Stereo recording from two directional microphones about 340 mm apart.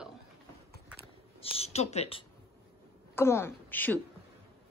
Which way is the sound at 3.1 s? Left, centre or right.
Centre.